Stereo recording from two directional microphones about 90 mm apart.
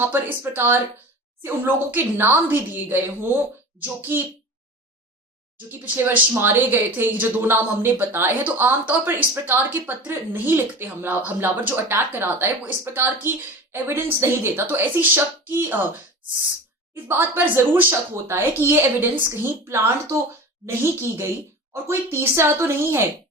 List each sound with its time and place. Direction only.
0.0 s speech: 20° right (ahead or behind)
5.7 s speech: 20° right (ahead or behind)
16.9 s speech: 25° right (ahead or behind)